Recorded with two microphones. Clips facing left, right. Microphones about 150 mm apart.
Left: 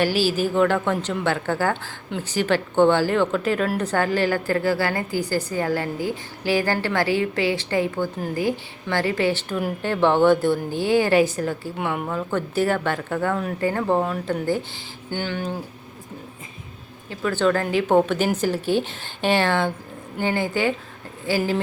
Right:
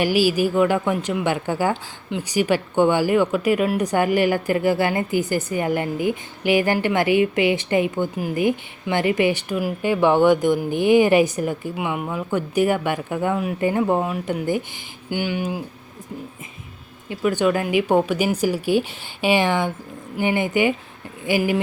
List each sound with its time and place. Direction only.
0.0 s a woman's voice: 15° right (ahead or behind)
11.8 s speech: 5° right (ahead or behind)
17.1 s speech: 15° right (ahead or behind)